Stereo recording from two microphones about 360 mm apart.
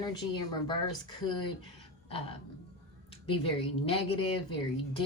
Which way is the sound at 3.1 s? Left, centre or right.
Centre.